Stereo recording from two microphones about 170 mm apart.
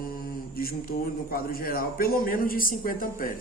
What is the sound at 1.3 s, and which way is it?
Speech, 60° left (ahead or behind).